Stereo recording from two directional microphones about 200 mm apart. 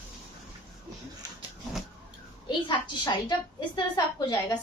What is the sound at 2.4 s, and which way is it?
A woman's voice, 25° left (ahead or behind).